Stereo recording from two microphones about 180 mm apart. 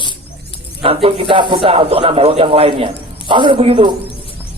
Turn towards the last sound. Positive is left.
turn(degrees=-30)  # may be behind; listen again after turning